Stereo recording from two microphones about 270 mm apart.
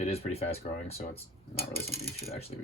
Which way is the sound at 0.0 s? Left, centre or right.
Left.